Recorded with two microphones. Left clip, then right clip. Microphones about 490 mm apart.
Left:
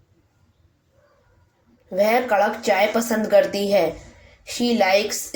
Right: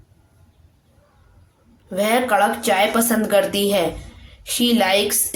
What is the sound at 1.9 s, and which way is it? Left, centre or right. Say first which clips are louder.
Speech: even; right.